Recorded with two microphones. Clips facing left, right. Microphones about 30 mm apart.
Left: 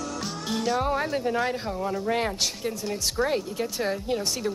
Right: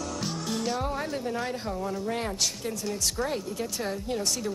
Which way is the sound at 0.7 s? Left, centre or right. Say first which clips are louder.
Left 5 dB; left.